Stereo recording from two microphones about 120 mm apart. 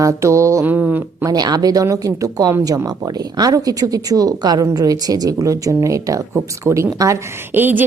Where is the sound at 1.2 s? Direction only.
35° right (ahead or behind).